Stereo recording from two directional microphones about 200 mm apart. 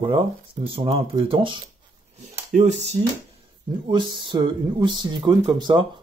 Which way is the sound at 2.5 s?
35° right (ahead or behind).